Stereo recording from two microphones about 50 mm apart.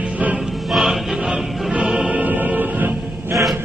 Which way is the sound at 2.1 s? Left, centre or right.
Right.